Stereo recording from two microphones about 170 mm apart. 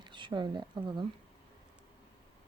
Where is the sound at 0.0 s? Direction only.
30° right (ahead or behind).